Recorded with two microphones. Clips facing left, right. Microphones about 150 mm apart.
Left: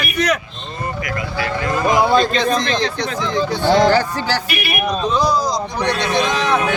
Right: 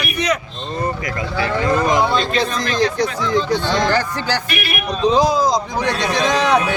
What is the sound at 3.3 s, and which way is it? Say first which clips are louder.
Speech: left 5 dB; 10° left (ahead or behind).